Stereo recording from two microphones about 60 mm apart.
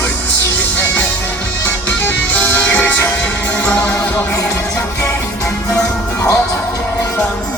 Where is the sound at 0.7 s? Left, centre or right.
Left.